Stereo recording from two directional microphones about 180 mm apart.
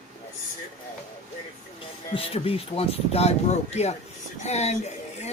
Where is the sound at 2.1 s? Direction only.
30° left (ahead or behind).